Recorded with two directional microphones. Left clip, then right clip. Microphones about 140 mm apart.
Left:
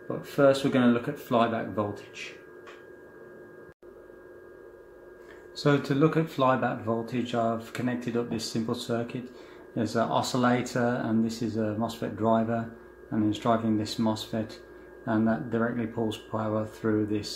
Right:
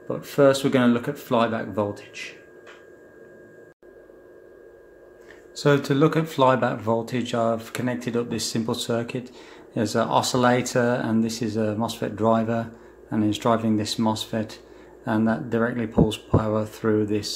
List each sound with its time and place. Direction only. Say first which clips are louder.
0.2 s speech: right 4 dB; 45° right (ahead or behind)
5.6 s speech: right 5 dB; 35° right (ahead or behind)